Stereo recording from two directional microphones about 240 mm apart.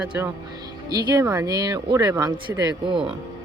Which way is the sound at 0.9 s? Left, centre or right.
Centre.